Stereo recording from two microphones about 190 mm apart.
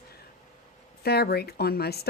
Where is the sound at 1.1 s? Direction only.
55° left (ahead or behind).